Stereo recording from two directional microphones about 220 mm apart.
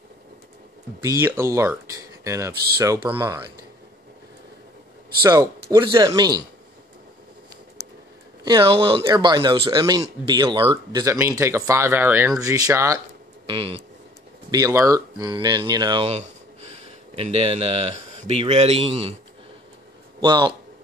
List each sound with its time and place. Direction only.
1.0 s speech: 10° right (ahead or behind)
5.2 s speech: 15° right (ahead or behind)
8.5 s speech: 20° right (ahead or behind)
13.5 s speech: 25° right (ahead or behind)
14.5 s speech: 15° right (ahead or behind)
20.2 s a man's voice: 20° right (ahead or behind)